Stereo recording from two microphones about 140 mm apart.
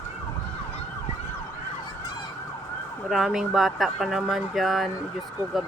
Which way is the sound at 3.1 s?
Centre (ahead or behind).